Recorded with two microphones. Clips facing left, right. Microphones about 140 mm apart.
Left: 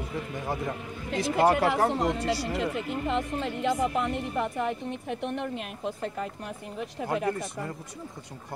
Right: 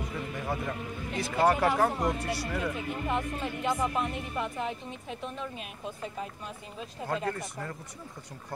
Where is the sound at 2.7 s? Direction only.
70° left (ahead or behind).